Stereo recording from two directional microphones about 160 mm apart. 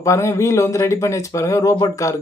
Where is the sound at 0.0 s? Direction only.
20° left (ahead or behind).